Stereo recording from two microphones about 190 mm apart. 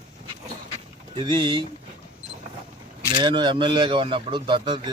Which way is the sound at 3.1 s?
25° right (ahead or behind).